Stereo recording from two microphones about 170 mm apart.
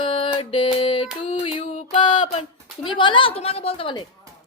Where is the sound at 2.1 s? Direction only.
45° left (ahead or behind).